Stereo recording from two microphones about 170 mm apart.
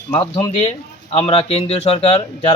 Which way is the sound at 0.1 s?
30° left (ahead or behind).